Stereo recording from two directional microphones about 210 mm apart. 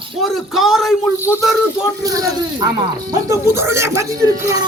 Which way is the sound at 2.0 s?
15° right (ahead or behind).